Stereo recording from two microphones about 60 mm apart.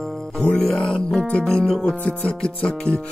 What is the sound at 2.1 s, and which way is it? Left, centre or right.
Music, centre.